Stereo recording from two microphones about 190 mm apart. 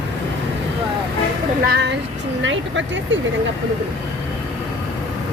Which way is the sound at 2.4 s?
75° right (ahead or behind).